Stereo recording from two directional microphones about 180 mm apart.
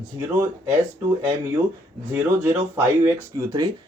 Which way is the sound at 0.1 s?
15° right (ahead or behind).